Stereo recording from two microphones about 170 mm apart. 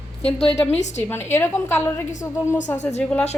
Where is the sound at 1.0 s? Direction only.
15° left (ahead or behind).